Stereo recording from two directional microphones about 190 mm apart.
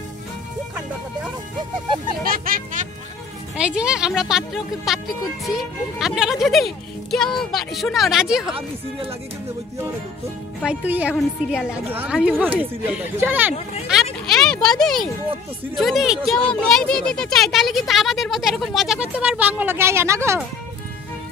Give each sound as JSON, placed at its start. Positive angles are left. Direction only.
{"t": 2.2, "sound": "speech", "side_deg": -50}
{"t": 3.5, "sound": "speech", "side_deg": -5}
{"t": 10.6, "sound": "speech", "side_deg": -5}
{"t": 13.9, "sound": "a sound", "side_deg": -5}
{"t": 15.7, "sound": "speech", "side_deg": 0}